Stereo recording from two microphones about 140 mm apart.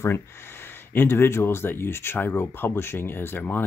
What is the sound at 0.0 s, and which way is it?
Speech, 15° left (ahead or behind).